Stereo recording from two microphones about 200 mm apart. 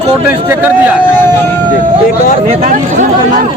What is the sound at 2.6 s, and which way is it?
Speech, 40° right (ahead or behind).